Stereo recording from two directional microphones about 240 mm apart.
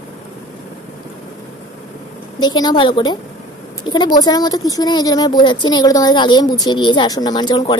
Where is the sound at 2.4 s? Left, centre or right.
Centre.